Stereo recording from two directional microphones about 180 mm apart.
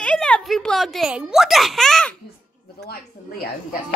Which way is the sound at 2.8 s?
60° left (ahead or behind).